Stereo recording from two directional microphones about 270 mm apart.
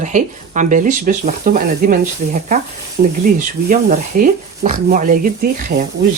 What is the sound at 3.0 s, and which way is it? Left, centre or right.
Speech, right.